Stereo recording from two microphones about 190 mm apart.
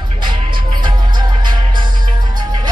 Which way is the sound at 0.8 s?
25° right (ahead or behind).